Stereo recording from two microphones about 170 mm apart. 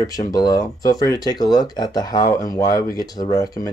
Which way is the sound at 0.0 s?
20° left (ahead or behind).